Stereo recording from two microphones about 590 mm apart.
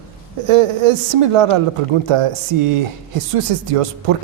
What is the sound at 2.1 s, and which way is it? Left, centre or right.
Speech, right.